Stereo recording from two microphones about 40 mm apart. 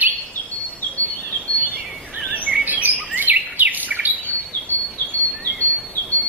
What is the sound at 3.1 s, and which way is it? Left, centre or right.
Bird vocalization, right.